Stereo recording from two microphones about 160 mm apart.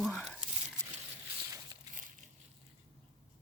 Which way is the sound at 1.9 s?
55° right (ahead or behind).